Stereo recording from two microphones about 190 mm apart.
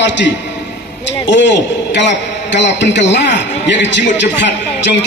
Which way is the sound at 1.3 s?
70° left (ahead or behind).